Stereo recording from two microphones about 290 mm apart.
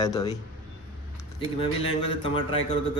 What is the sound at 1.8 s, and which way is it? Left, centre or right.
Speech, centre.